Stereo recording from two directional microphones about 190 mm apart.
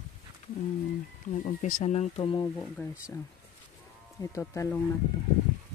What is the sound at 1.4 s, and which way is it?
Speech, 45° left (ahead or behind).